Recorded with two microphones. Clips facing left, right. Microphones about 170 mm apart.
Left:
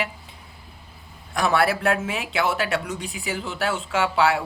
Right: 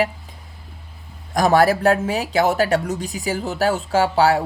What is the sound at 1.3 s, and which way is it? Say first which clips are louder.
Speech: right 6 dB; 40° right (ahead or behind).